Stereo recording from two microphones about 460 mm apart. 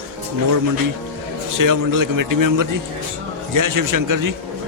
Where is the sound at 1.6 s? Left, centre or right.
Right.